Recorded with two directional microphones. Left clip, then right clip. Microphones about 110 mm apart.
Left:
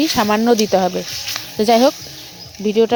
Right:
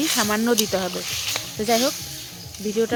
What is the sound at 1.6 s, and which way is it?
Speech, 90° left.